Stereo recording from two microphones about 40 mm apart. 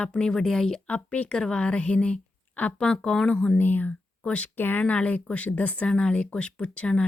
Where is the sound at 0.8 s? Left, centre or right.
Left.